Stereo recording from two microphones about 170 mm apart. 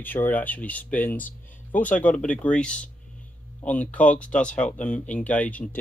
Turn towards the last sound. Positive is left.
turn(degrees=10)  # may be behind; listen again after turning